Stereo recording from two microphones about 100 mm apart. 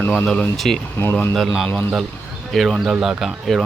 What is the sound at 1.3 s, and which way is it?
Speech, centre (ahead or behind).